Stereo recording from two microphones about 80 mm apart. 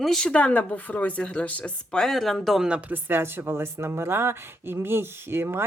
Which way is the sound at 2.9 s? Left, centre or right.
Right.